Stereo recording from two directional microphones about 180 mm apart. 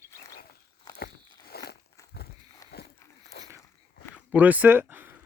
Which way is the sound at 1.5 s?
60° left (ahead or behind).